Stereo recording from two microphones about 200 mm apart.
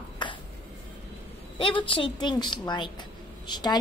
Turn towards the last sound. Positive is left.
turn(degrees=20)  # may be behind; listen again after turning